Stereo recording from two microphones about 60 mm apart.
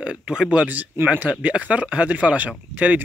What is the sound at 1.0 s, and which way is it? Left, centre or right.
Speech, right.